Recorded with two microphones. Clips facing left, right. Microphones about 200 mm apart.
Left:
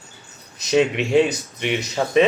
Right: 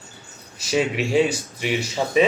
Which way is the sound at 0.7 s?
5° right (ahead or behind).